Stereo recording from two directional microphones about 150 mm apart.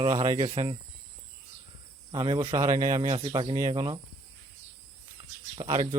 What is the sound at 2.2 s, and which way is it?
Speech, 30° right (ahead or behind).